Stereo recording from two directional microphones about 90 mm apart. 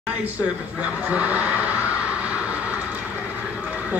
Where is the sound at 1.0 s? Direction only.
15° right (ahead or behind).